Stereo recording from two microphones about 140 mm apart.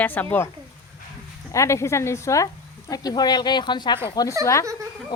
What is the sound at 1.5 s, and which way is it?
A woman's voice, 20° left (ahead or behind).